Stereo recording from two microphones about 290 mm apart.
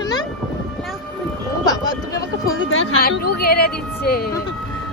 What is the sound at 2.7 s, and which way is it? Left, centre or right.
Speech, left.